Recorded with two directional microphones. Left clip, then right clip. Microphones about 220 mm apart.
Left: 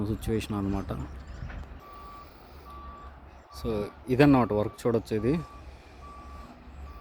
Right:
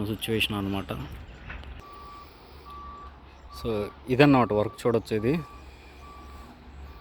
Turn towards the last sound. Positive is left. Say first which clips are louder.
# right 2 dB
turn(degrees=5)  # may be behind; listen again after turning